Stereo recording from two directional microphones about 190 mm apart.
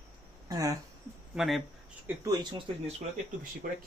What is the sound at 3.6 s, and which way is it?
Speech, 50° right (ahead or behind).